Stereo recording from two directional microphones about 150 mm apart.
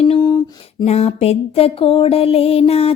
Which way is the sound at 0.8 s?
45° left (ahead or behind).